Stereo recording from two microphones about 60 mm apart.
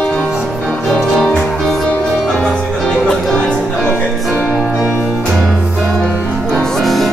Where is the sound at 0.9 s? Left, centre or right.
Centre.